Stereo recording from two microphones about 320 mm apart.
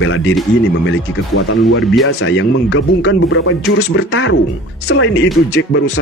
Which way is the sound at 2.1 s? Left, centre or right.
Left.